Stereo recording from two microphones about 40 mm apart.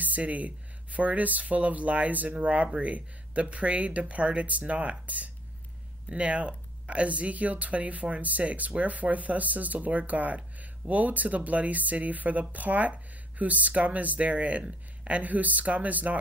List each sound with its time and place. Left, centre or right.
0.0 s speech: right